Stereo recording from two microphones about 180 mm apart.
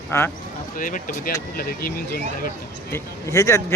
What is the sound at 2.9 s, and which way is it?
Speech, 15° left (ahead or behind).